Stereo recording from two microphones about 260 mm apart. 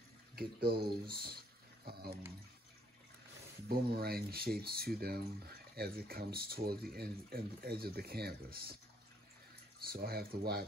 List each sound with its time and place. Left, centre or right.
0.4 s speech: right
3.6 s speech: right
9.9 s speech: right